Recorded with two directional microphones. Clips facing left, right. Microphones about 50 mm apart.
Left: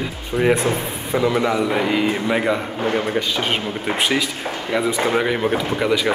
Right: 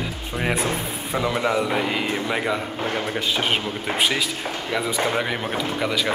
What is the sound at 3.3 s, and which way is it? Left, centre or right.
Speech, centre.